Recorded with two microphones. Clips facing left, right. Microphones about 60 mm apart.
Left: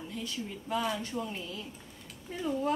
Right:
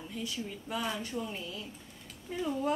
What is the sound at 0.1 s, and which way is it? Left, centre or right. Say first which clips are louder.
Speech: right 1 dB; centre.